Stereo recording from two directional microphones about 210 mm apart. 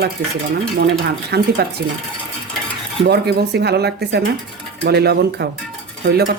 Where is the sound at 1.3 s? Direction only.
50° right (ahead or behind).